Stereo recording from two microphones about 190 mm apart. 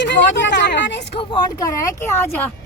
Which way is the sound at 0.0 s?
70° left (ahead or behind).